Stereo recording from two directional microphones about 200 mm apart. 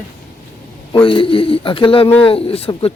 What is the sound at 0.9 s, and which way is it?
Speech, 25° left (ahead or behind).